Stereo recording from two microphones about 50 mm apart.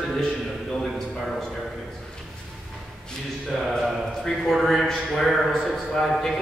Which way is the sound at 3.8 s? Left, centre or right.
Centre.